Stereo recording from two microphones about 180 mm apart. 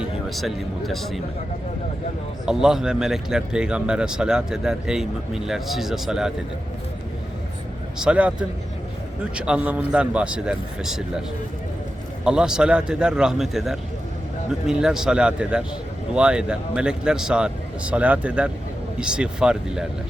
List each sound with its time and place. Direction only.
0.0 s speech: centre (ahead or behind)
2.5 s a man's voice: 5° right (ahead or behind)
7.9 s a man's voice: 5° right (ahead or behind)
12.2 s a man's voice: 5° right (ahead or behind)